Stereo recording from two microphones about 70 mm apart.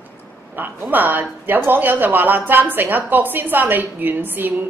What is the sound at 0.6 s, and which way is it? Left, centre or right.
A woman's voice, right.